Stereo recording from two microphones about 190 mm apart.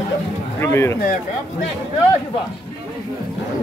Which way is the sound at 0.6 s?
15° left (ahead or behind).